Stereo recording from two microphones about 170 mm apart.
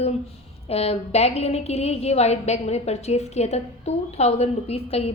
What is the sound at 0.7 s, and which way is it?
A woman's voice, 35° left (ahead or behind).